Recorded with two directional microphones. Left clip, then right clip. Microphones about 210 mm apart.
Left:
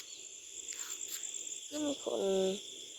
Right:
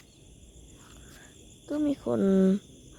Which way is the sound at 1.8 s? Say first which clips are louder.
Right 7 dB; 30° right (ahead or behind).